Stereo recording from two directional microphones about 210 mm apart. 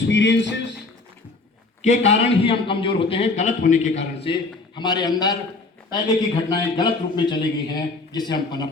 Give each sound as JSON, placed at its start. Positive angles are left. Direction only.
{"t": 0.1, "sound": "speech", "side_deg": 60}
{"t": 1.8, "sound": "a man's voice", "side_deg": 35}
{"t": 4.2, "sound": "a man's voice", "side_deg": 25}